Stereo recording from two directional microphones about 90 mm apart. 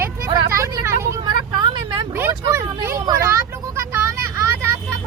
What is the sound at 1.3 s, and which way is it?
Vehicle, 55° right (ahead or behind).